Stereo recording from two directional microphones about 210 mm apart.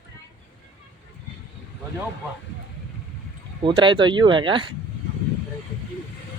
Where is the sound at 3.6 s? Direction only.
25° right (ahead or behind).